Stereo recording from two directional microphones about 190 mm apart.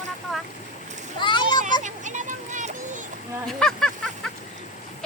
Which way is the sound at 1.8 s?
40° right (ahead or behind).